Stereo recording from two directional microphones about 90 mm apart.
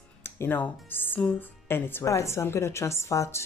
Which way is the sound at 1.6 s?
25° left (ahead or behind).